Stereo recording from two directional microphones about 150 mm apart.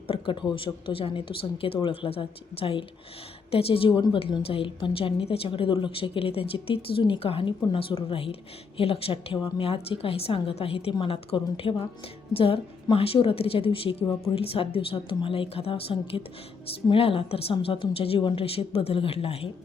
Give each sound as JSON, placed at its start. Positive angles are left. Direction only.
{"t": 0.1, "sound": "a woman's voice", "side_deg": 35}